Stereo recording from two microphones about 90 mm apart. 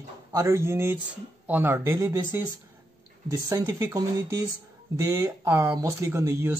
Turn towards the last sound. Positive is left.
turn(degrees=-30)  # may be behind; listen again after turning